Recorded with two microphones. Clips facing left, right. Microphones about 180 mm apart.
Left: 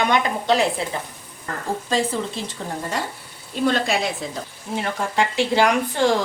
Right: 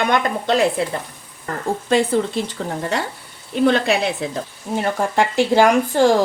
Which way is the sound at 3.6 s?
60° right (ahead or behind).